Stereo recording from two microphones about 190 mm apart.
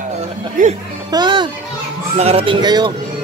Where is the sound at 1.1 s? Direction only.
25° right (ahead or behind).